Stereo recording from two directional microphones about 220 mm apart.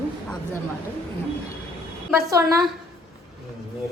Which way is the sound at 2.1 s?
15° right (ahead or behind).